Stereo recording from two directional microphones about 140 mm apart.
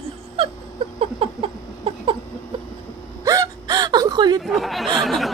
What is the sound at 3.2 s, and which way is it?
Hiccup, 25° right (ahead or behind).